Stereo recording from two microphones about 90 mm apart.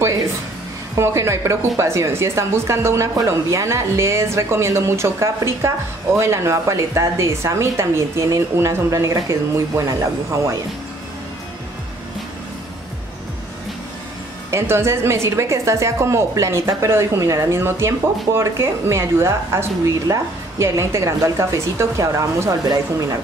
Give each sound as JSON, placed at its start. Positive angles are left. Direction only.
{"t": 0.9, "sound": "a woman's voice", "side_deg": -30}
{"t": 14.5, "sound": "a woman's voice", "side_deg": -30}